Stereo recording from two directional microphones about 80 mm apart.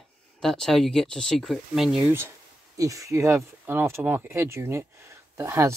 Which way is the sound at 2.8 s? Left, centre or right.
Right.